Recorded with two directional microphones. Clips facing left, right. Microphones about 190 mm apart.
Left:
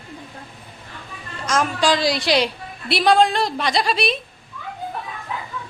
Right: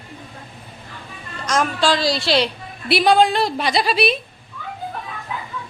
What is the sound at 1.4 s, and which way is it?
A woman's voice, 10° left (ahead or behind).